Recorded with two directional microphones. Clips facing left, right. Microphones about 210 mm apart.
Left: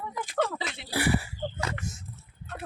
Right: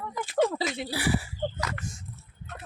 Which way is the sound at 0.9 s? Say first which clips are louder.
Left 4 dB; 55° left (ahead or behind).